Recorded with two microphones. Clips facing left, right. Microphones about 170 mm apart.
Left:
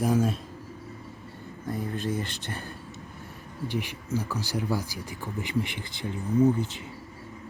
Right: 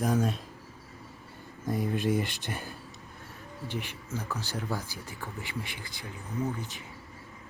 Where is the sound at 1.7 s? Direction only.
15° right (ahead or behind).